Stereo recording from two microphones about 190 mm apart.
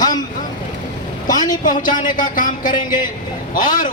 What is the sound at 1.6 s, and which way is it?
A man's voice, 45° left (ahead or behind).